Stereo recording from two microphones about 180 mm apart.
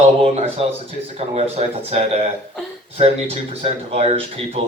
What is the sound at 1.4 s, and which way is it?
Speech, 35° right (ahead or behind).